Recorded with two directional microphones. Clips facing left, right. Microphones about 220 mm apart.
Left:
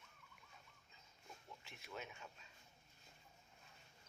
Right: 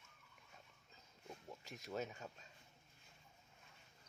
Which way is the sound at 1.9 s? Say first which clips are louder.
Right 7 dB; 40° right (ahead or behind).